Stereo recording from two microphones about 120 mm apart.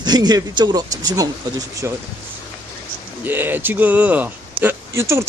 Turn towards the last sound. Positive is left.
turn(degrees=-25)  # may be behind; listen again after turning